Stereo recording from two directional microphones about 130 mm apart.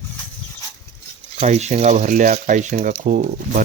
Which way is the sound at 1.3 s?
60° right (ahead or behind).